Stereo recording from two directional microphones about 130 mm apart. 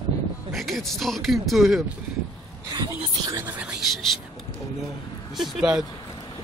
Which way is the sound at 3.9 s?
Centre (ahead or behind).